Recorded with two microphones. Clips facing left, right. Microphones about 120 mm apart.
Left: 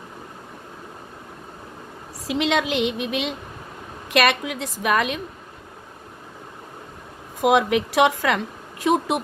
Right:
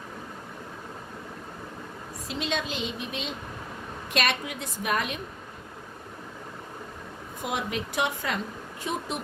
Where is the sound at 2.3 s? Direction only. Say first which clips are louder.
Left 9 dB; 90° left.